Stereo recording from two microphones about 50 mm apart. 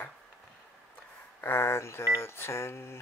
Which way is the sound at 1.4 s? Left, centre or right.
Left.